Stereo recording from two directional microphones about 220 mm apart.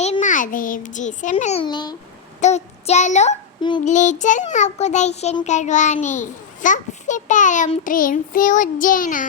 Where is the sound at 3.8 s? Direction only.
35° left (ahead or behind).